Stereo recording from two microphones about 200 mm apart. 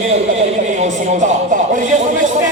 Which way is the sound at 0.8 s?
35° right (ahead or behind).